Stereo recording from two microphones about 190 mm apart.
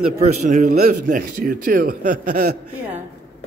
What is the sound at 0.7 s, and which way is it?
A man's voice, 50° right (ahead or behind).